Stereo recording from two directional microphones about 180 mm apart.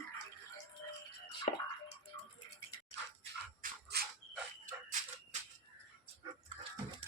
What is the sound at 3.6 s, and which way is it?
Dog, 50° right (ahead or behind).